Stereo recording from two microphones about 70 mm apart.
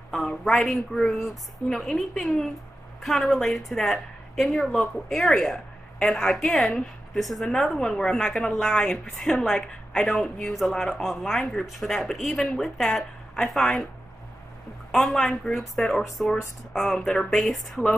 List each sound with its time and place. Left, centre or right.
0.1 s a woman's voice: centre
10.5 s a woman's voice: centre
14.9 s a woman's voice: centre